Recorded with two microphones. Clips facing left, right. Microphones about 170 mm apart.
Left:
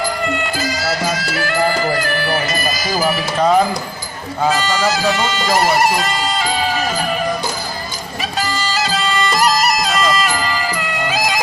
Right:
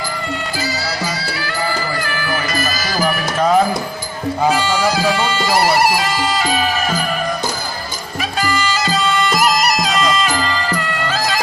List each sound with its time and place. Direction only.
0.5 s music: 50° left (ahead or behind); by 2.6 s 30° left (ahead or behind)
2.9 s music: 5° left (ahead or behind)
4.4 s speech: 15° right (ahead or behind)
8.4 s music: centre (ahead or behind)